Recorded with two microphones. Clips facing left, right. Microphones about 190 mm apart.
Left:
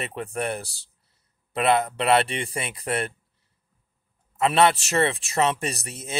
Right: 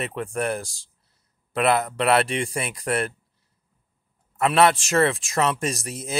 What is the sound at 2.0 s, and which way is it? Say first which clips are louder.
Speech: right 1 dB; centre (ahead or behind).